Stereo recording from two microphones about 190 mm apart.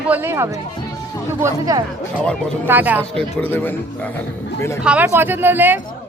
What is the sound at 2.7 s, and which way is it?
Speech, 10° right (ahead or behind).